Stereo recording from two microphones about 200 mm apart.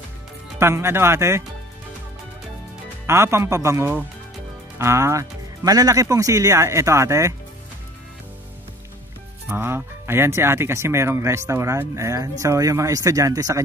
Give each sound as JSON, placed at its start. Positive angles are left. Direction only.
{"t": 0.6, "sound": "speech", "side_deg": -10}
{"t": 3.1, "sound": "speech", "side_deg": -15}
{"t": 9.5, "sound": "speech", "side_deg": -10}